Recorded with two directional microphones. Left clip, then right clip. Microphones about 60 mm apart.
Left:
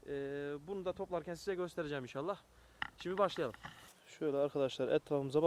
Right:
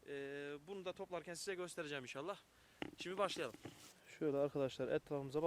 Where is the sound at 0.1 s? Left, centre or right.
Right.